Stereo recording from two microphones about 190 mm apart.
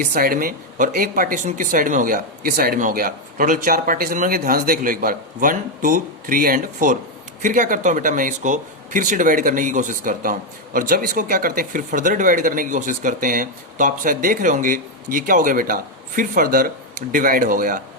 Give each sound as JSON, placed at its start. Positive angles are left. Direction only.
{"t": 0.0, "sound": "speech", "side_deg": -50}